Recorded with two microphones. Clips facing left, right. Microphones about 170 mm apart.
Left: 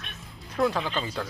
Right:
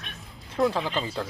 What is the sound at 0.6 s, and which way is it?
Speech, 25° right (ahead or behind).